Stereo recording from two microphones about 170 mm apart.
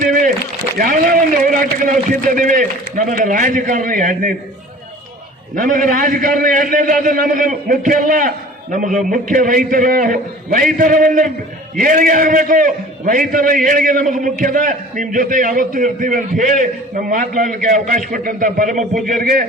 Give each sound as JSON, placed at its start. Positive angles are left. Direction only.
{"t": 0.0, "sound": "a sound", "side_deg": -50}
{"t": 0.8, "sound": "a man's voice", "side_deg": -55}
{"t": 5.5, "sound": "a man's voice", "side_deg": -50}